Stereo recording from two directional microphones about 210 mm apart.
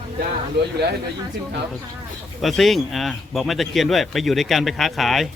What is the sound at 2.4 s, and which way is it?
Speech, centre (ahead or behind).